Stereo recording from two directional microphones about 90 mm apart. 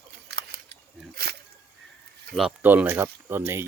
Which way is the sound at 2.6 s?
20° right (ahead or behind).